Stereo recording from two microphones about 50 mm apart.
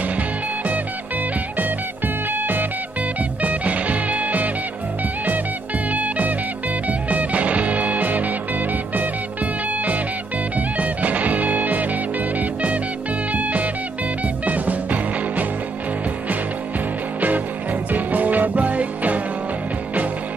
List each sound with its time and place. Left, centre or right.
2.3 s music: right
3.4 s music: right
5.9 s music: right
10.5 s music: right
17.9 s music: right